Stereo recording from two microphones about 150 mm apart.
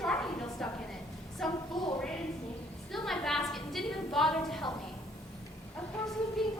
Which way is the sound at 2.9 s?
Centre (ahead or behind).